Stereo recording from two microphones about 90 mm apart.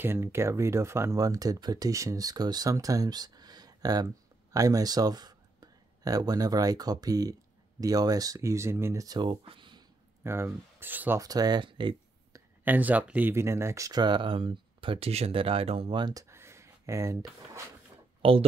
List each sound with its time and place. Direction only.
0.0 s speech: 30° right (ahead or behind)
9.0 s speech: 55° right (ahead or behind)
10.2 s speech: 30° right (ahead or behind)
11.1 s speech: 45° right (ahead or behind)
12.6 s speech: 20° right (ahead or behind)
13.3 s speech: 30° right (ahead or behind)
14.0 s speech: 65° right (ahead or behind); by 16.0 s 90° right
16.0 s speech: 45° right (ahead or behind)
16.3 s a sound: 30° right (ahead or behind)
18.2 s speech: 90° right